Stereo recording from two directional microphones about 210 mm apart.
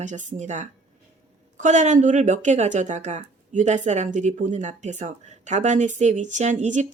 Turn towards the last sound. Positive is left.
turn(degrees=-35)  # may be behind; listen again after turning